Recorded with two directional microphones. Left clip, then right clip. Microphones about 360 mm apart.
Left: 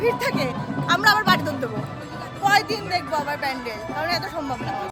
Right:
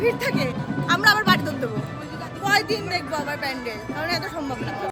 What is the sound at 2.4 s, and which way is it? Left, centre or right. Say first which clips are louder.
A woman's voice: left 2 dB; centre.